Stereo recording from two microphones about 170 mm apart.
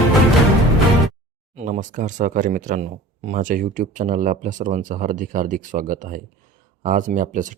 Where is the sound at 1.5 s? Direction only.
45° right (ahead or behind).